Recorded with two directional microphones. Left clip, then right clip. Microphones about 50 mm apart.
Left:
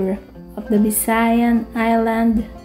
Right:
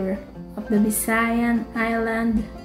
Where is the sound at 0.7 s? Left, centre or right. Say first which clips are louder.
Left 4 dB; left.